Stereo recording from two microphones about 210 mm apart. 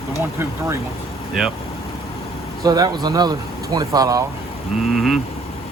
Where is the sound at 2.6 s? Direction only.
20° right (ahead or behind).